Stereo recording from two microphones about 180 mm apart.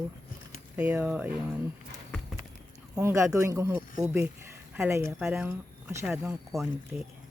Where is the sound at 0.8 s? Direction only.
10° right (ahead or behind).